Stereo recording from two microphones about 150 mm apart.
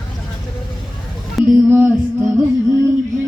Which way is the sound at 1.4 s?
Centre (ahead or behind).